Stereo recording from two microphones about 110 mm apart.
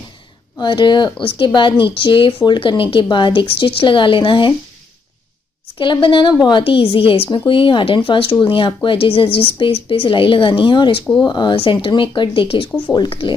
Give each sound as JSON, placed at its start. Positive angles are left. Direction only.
{"t": 0.6, "sound": "speech", "side_deg": 45}
{"t": 5.8, "sound": "a woman's voice", "side_deg": 50}